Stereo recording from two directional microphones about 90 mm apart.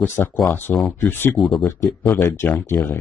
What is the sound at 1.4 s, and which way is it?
Speech, centre (ahead or behind).